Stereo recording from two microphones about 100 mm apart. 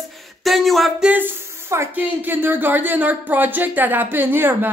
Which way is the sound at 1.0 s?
20° right (ahead or behind).